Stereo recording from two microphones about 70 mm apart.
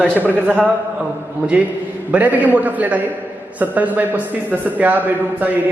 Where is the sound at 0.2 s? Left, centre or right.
Right.